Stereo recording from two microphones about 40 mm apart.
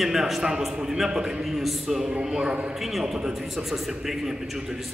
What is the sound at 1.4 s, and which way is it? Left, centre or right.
Speech, centre.